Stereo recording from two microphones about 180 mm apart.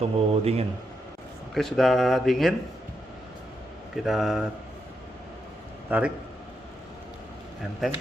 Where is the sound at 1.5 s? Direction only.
Centre (ahead or behind).